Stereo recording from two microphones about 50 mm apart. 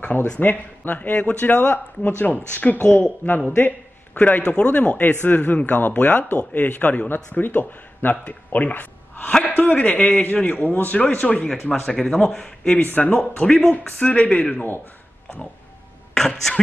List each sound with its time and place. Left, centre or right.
0.0 s speech: left
11.3 s speech: centre
12.7 s speech: left
13.1 s speech: centre; by 14.8 s left
16.2 s speech: centre